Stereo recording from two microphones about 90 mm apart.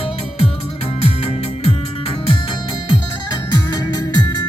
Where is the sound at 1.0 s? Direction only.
90° left.